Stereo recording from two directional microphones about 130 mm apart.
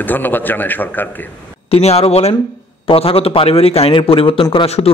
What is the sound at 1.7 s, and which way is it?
A man's voice, 50° left (ahead or behind).